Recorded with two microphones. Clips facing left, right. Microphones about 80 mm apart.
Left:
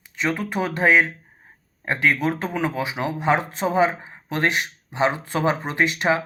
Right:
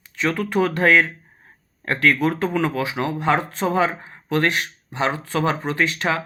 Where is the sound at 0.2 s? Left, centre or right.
Centre.